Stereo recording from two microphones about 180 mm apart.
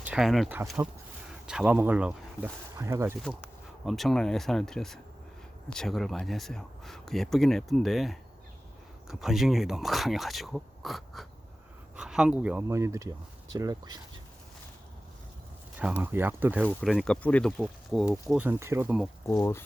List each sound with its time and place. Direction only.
0.0 s speech: 5° right (ahead or behind)
3.2 s speech: centre (ahead or behind); by 14.0 s 20° right (ahead or behind)
15.8 s speech: 10° right (ahead or behind)
16.6 s speech: centre (ahead or behind)
19.3 s speech: 15° left (ahead or behind)